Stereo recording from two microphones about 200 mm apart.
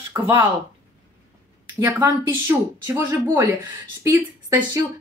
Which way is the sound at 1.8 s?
10° right (ahead or behind).